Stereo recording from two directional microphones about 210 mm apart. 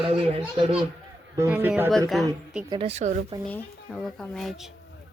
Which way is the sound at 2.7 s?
30° right (ahead or behind).